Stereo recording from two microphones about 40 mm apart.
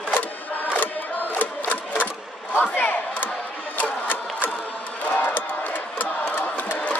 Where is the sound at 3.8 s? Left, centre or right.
Left.